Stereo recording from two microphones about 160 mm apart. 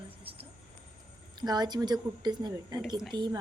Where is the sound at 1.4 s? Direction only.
25° right (ahead or behind).